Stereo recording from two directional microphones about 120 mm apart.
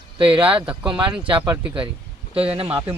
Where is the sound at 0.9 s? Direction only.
40° right (ahead or behind).